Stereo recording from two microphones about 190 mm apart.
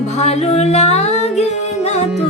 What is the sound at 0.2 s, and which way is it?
Music, 35° left (ahead or behind).